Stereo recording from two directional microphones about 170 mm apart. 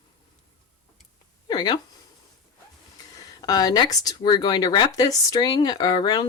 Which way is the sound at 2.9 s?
25° left (ahead or behind).